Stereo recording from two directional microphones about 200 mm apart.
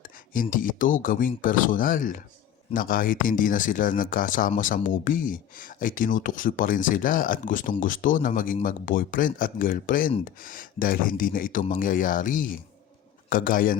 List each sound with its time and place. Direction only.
0.0 s speech: 45° left (ahead or behind)